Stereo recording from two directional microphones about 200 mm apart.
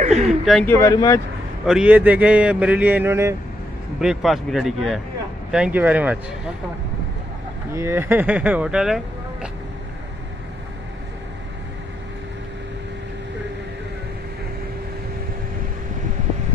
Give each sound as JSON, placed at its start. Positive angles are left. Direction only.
{"t": 0.0, "sound": "speech", "side_deg": -35}
{"t": 0.3, "sound": "speech", "side_deg": 0}
{"t": 0.7, "sound": "speech", "side_deg": 15}
{"t": 1.7, "sound": "speech", "side_deg": -5}
{"t": 4.0, "sound": "speech", "side_deg": 0}
{"t": 7.7, "sound": "speech", "side_deg": -10}